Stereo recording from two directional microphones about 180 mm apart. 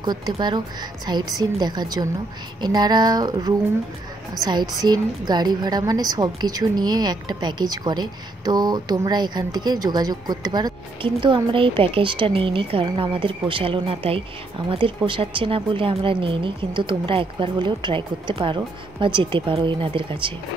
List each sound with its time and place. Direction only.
0.0 s a woman's voice: 25° right (ahead or behind)